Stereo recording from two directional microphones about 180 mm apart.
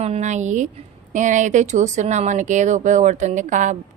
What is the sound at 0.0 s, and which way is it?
Speech, 40° right (ahead or behind).